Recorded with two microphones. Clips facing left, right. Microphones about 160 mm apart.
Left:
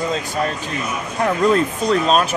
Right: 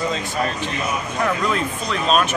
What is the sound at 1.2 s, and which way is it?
Speech, 40° left (ahead or behind).